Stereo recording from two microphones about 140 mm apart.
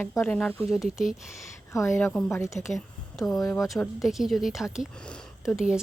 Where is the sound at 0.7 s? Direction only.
Centre (ahead or behind).